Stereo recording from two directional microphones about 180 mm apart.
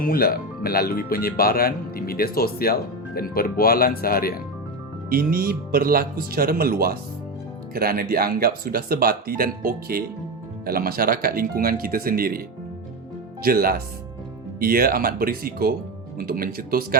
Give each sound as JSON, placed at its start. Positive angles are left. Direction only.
{"t": 0.0, "sound": "speech", "side_deg": 55}
{"t": 5.0, "sound": "speech", "side_deg": -55}
{"t": 13.4, "sound": "speech", "side_deg": -55}